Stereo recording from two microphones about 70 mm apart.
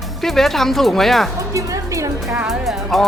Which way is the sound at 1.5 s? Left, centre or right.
Right.